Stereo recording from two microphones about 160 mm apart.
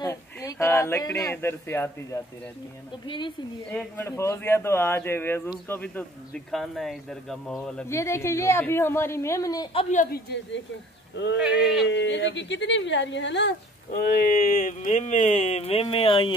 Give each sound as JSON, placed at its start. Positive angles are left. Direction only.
{"t": 0.0, "sound": "speech", "side_deg": 20}
{"t": 3.1, "sound": "a woman's voice", "side_deg": 30}
{"t": 3.7, "sound": "a woman's voice", "side_deg": 15}
{"t": 7.9, "sound": "a woman's voice", "side_deg": 15}
{"t": 9.8, "sound": "speech", "side_deg": 45}
{"t": 11.4, "sound": "a man's voice", "side_deg": -5}
{"t": 11.9, "sound": "speech", "side_deg": 90}
{"t": 14.1, "sound": "speech", "side_deg": 65}